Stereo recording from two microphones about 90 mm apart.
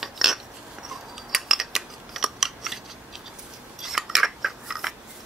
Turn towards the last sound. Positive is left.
turn(degrees=-5)  # may be behind; listen again after turning